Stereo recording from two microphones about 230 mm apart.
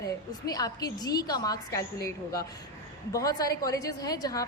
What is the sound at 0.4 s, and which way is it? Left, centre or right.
A woman's voice, centre.